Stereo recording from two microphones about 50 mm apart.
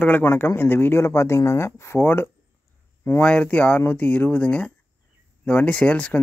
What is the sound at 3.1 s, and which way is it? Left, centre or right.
Speech, left.